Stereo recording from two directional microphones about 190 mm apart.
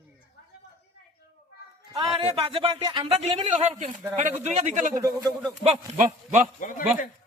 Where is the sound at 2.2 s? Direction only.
30° right (ahead or behind).